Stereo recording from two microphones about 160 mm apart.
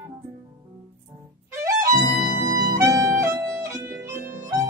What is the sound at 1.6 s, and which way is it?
Music, 20° right (ahead or behind).